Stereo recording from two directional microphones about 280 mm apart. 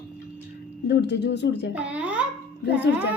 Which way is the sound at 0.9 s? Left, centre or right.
Left.